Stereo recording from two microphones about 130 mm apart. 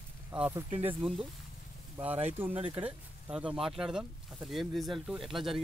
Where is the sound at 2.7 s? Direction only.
15° right (ahead or behind).